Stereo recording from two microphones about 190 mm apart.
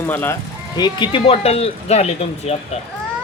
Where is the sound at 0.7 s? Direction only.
25° left (ahead or behind).